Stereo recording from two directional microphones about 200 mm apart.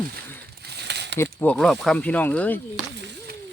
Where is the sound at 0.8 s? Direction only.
60° right (ahead or behind).